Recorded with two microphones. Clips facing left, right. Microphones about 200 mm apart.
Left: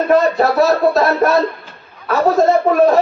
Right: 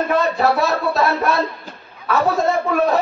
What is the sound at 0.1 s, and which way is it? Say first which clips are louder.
A man's voice: left 6 dB; 40° left (ahead or behind).